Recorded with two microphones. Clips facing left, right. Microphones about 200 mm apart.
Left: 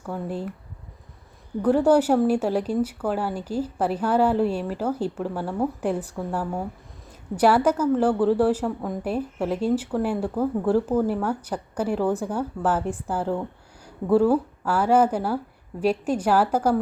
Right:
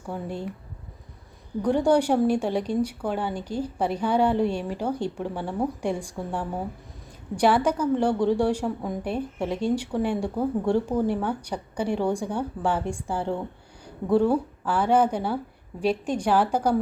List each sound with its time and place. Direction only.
0.1 s a woman's voice: centre (ahead or behind)
1.6 s a woman's voice: 5° left (ahead or behind)